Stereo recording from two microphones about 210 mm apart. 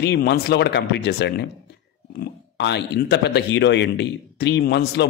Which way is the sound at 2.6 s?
55° left (ahead or behind).